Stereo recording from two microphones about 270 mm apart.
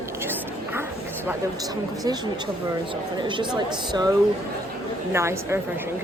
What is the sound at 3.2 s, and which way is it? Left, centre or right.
Speech, centre.